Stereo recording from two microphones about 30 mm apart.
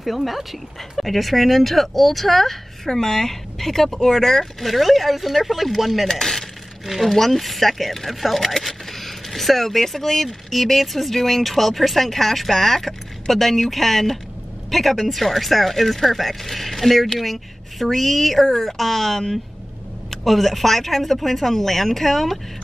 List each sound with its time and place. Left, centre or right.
0.0 s speech: centre
4.6 s speech: centre
6.0 s speech: centre
6.9 s speech: centre